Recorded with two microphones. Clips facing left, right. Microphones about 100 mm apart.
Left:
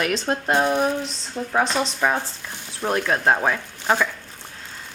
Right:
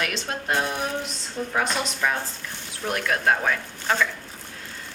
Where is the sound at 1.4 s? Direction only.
20° left (ahead or behind).